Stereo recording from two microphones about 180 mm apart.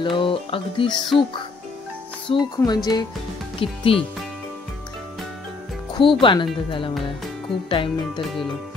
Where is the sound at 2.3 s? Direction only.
30° left (ahead or behind).